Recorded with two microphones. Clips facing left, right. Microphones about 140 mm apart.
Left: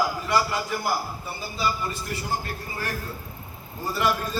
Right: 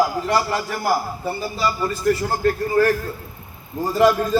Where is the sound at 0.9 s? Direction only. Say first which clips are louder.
Right 7 dB; 70° right (ahead or behind).